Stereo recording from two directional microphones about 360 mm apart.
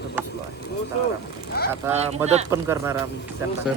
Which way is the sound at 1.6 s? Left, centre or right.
Left.